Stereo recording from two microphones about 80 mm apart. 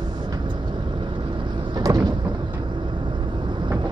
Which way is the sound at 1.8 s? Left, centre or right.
Right.